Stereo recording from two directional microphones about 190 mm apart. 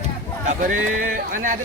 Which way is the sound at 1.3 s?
45° right (ahead or behind).